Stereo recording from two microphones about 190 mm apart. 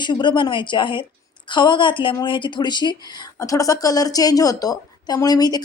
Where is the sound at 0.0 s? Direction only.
25° left (ahead or behind).